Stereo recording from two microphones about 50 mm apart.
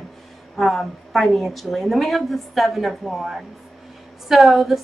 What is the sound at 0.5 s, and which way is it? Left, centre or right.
A woman's voice, centre.